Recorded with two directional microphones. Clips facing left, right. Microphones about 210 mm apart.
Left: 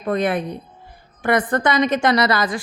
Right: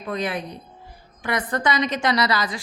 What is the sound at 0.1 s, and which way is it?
A woman's voice, 55° left (ahead or behind).